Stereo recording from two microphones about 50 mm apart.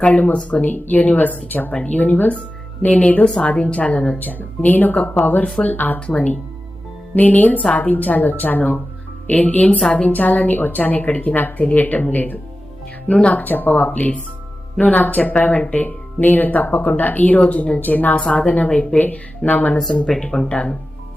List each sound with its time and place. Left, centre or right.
0.0 s a woman's voice: left
17.4 s a woman's voice: left
17.7 s a woman's voice: left
20.1 s speech: centre